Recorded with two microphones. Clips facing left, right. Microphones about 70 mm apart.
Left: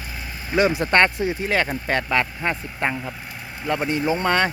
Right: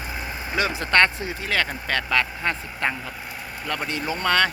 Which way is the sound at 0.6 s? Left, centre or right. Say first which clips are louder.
Left 3 dB; centre.